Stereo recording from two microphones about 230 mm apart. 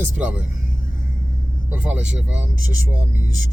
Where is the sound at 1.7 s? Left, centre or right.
Centre.